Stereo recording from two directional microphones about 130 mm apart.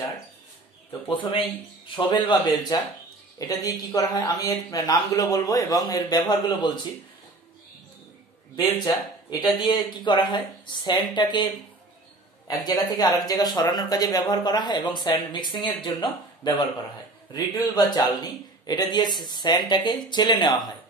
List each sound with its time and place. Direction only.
1.0 s speech: 40° left (ahead or behind)
8.5 s speech: 30° left (ahead or behind)